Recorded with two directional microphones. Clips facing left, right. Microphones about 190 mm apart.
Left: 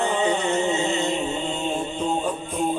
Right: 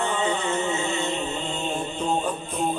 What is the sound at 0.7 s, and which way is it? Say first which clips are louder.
Music: left 3 dB; 20° left (ahead or behind).